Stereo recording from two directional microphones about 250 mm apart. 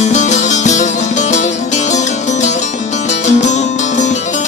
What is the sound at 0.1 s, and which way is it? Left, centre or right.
Music, left.